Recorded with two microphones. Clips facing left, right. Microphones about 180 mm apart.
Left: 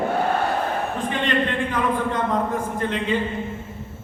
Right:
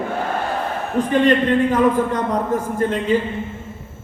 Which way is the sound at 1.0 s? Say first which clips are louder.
Right 11 dB; 40° right (ahead or behind).